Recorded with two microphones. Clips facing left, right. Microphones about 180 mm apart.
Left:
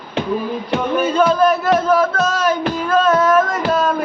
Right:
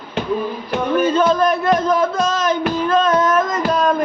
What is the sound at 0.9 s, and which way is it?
Speech, 10° left (ahead or behind).